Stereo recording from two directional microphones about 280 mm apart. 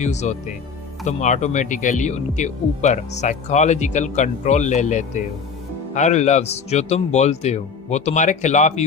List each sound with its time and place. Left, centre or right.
0.0 s speech: left